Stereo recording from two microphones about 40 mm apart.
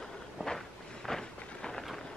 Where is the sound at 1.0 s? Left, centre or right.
Centre.